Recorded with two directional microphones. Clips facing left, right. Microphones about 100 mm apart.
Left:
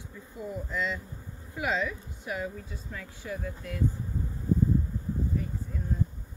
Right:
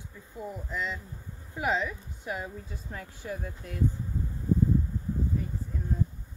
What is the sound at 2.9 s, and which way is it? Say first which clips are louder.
Speech: even; 40° right (ahead or behind).